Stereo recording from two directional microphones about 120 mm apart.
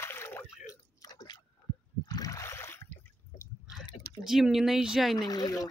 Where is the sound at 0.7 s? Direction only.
35° left (ahead or behind).